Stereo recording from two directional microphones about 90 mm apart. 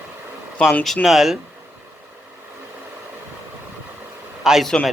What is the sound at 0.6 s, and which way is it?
Speech, 15° left (ahead or behind).